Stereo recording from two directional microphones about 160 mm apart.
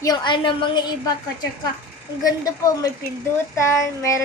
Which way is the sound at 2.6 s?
20° left (ahead or behind).